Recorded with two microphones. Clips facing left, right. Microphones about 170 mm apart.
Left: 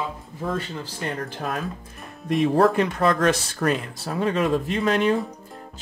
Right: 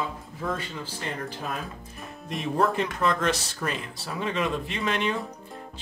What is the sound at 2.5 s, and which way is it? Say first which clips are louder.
Speech: left 3 dB; 70° left (ahead or behind).